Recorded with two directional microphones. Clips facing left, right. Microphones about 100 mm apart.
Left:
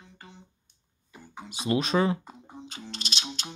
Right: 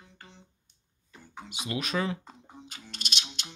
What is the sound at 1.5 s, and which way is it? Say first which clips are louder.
Speech: left 7 dB; 35° left (ahead or behind).